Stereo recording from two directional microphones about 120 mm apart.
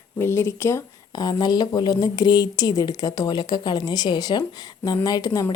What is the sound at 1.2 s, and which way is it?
A woman's voice, 35° left (ahead or behind).